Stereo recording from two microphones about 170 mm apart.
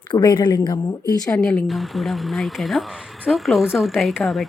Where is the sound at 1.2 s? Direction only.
5° left (ahead or behind).